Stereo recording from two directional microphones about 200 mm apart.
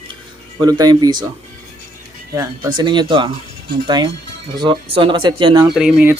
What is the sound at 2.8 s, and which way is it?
Speech, 20° right (ahead or behind).